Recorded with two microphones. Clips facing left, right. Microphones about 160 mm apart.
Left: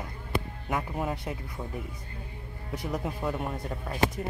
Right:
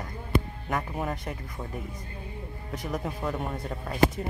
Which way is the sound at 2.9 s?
5° left (ahead or behind).